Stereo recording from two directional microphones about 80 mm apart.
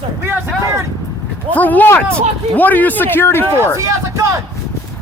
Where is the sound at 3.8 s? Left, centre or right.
Right.